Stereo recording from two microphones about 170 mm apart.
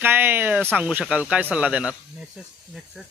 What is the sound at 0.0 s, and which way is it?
Speech, 10° right (ahead or behind).